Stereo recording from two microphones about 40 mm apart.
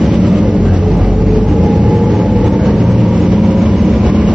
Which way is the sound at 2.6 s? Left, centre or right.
Right.